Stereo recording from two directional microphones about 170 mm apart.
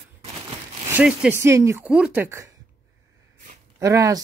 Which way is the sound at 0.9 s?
10° right (ahead or behind).